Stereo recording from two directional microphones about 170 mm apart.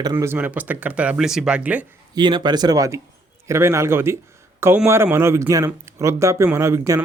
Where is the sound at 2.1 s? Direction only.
25° right (ahead or behind).